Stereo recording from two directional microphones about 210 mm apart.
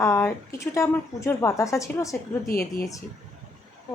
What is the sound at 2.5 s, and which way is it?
Speech, 45° left (ahead or behind).